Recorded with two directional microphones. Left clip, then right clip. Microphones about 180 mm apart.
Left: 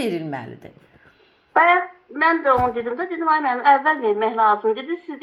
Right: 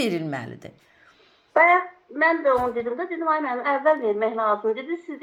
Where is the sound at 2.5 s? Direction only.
30° left (ahead or behind).